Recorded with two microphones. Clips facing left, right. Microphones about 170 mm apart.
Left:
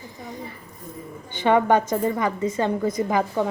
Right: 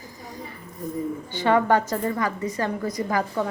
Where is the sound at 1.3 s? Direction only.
20° left (ahead or behind).